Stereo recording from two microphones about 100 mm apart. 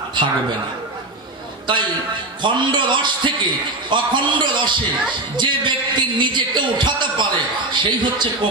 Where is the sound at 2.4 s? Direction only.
50° right (ahead or behind).